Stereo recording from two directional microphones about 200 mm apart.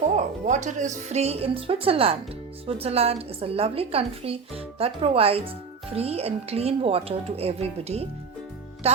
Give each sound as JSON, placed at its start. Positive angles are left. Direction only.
{"t": 0.4, "sound": "a woman's voice", "side_deg": -35}